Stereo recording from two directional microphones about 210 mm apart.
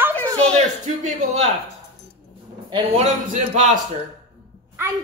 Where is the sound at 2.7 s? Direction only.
35° right (ahead or behind).